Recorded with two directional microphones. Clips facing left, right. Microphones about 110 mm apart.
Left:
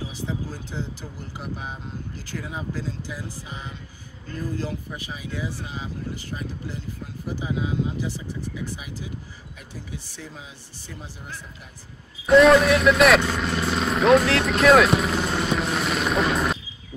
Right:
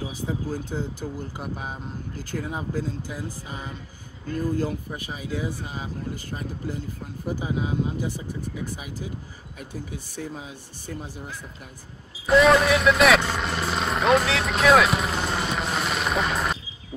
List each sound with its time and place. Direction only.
0.2 s speech: 50° right (ahead or behind)
7.6 s speech: 50° right (ahead or behind)
12.3 s vehicle: centre (ahead or behind)